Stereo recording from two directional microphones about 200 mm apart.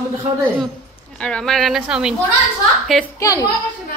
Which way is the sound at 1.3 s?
Centre (ahead or behind).